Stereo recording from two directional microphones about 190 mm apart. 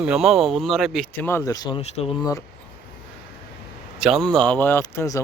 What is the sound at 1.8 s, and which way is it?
Speech, 35° left (ahead or behind).